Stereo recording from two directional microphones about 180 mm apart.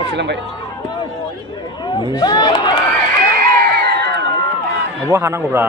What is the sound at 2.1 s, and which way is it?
Speech, 25° left (ahead or behind).